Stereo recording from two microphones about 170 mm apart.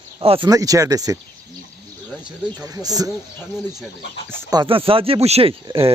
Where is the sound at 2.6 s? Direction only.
20° right (ahead or behind).